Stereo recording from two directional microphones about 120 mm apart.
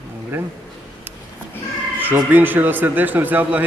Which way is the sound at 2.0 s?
15° right (ahead or behind).